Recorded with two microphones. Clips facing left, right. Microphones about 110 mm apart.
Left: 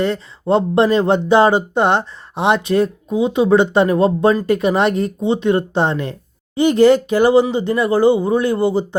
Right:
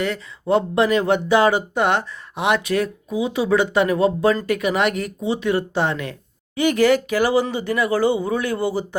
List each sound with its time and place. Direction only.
0.0 s speech: 30° left (ahead or behind)